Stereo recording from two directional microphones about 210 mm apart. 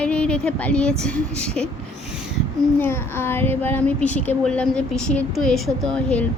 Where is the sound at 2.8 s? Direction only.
10° left (ahead or behind).